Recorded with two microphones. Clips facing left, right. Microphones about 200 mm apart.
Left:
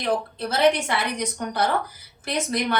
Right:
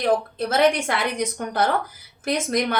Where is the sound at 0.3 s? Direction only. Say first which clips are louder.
Right 1 dB; 50° right (ahead or behind).